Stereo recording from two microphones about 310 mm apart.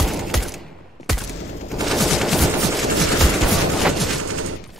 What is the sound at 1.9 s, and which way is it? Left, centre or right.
Machine gun, centre.